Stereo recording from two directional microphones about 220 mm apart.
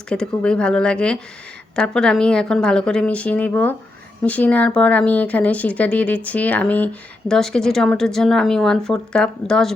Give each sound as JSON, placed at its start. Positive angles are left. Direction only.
{"t": 0.1, "sound": "speech", "side_deg": 5}